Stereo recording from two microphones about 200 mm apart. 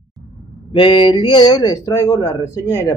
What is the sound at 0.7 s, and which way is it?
Speech, 25° left (ahead or behind).